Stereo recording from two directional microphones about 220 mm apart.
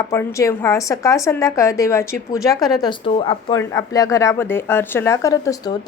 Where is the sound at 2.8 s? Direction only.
20° left (ahead or behind).